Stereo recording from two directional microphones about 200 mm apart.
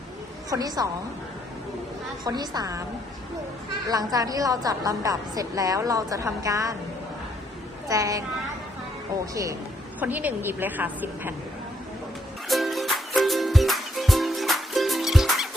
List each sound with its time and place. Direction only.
0.5 s a woman's voice: 20° right (ahead or behind)
2.2 s a woman's voice: 20° right (ahead or behind)
3.8 s a woman's voice: 20° right (ahead or behind)
7.9 s a woman's voice: 15° right (ahead or behind)
9.3 s a woman's voice: 15° right (ahead or behind)
12.5 s music: centre (ahead or behind)